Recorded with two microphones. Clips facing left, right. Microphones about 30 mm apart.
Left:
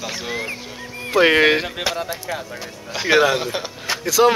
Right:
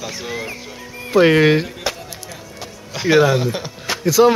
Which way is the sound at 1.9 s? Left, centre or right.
Centre.